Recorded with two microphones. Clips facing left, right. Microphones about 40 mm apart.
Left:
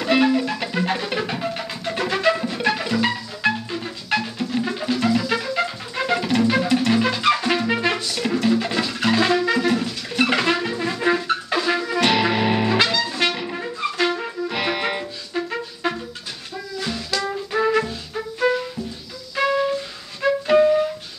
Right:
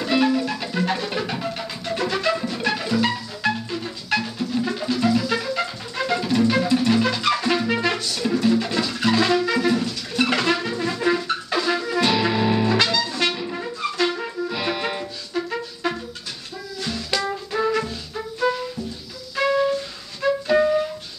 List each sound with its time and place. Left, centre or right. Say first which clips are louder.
0.2 s music: left 2 dB; left
12.0 s music: left 2 dB; left; by 14.2 s centre
14.5 s music: left 4 dB; left
15.3 s music: even; centre
17.5 s music: left 4 dB; centre
20.2 s flute: left 1 dB; left
20.5 s music: left 4 dB; centre